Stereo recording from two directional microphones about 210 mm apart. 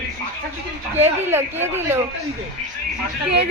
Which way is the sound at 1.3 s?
10° right (ahead or behind).